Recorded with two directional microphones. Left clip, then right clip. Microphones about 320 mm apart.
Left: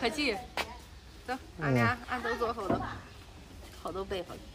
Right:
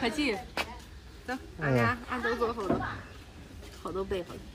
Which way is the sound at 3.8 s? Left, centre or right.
Centre.